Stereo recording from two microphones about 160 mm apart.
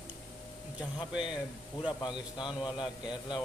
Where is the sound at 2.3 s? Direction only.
30° left (ahead or behind).